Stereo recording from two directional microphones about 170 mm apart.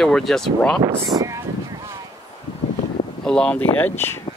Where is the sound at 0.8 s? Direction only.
35° right (ahead or behind).